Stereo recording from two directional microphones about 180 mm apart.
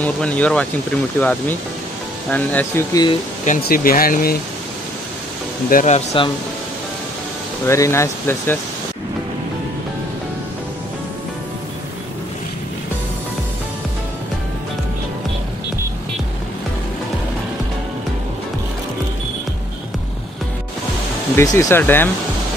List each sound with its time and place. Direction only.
0.0 s speech: 10° left (ahead or behind)
2.3 s speech: 10° left (ahead or behind)
2.9 s speech: 20° left (ahead or behind)
3.4 s speech: 55° left (ahead or behind)
5.7 s speech: 45° left (ahead or behind)
7.6 s speech: 15° left (ahead or behind)
21.4 s speech: 15° left (ahead or behind)